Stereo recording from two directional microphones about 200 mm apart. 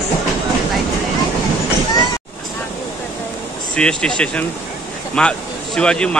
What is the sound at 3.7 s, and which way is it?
Speech, 5° left (ahead or behind).